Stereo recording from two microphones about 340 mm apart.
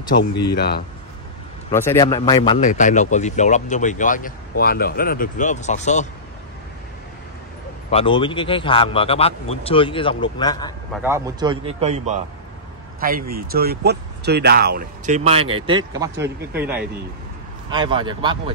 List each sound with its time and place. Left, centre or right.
0.6 s speech: left
1.7 s speech: centre
7.9 s a man's voice: centre
11.0 s speech: centre